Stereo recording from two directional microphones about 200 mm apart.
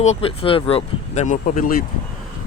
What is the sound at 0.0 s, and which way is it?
Speech, 30° left (ahead or behind).